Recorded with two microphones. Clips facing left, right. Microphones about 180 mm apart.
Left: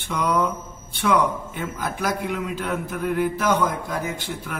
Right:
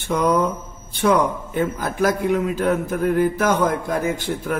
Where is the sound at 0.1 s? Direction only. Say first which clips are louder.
Right 4 dB; 40° right (ahead or behind).